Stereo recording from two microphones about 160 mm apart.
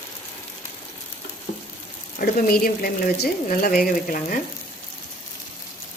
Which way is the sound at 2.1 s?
70° left (ahead or behind).